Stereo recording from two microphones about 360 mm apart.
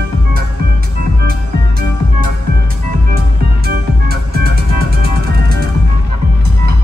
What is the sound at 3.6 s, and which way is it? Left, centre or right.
Music, right.